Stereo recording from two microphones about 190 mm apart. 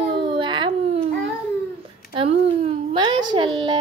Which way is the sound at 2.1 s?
30° right (ahead or behind).